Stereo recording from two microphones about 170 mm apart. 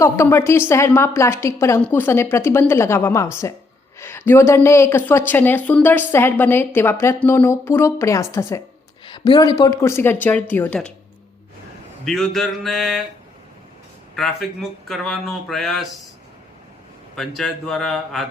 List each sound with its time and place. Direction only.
0.0 s speech: 15° left (ahead or behind)
12.0 s speech: centre (ahead or behind)
14.2 s speech: centre (ahead or behind)
17.2 s speech: centre (ahead or behind)